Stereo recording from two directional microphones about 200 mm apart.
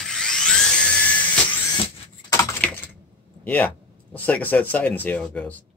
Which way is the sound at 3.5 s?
10° left (ahead or behind).